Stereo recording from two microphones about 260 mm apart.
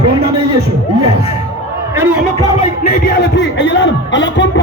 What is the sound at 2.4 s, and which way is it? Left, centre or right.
Speech, centre.